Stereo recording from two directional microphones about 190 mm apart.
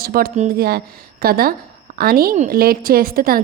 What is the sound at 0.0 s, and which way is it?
A woman's voice, 50° right (ahead or behind).